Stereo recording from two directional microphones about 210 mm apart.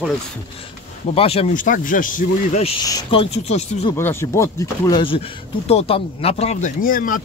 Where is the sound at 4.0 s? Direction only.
10° left (ahead or behind).